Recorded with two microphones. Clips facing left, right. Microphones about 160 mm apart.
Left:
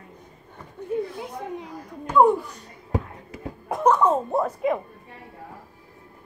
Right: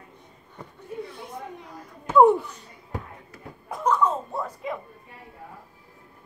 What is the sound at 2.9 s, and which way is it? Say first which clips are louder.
Music: left 8 dB; 90° left.